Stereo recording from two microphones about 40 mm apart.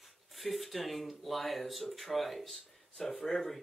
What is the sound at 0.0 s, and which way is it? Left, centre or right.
Speech, centre.